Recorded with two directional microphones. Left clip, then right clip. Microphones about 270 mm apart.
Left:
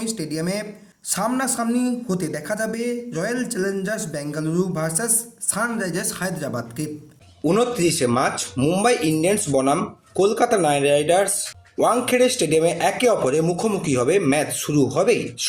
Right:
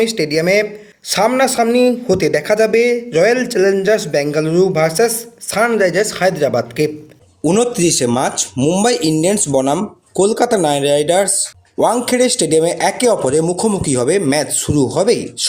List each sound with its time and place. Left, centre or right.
0.0 s speech: left
7.4 s speech: right